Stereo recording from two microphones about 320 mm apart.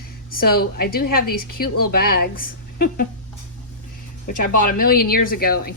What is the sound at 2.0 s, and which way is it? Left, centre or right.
Speech, left.